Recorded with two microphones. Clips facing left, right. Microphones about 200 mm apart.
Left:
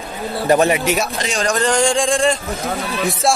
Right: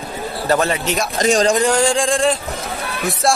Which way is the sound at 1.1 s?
45° right (ahead or behind).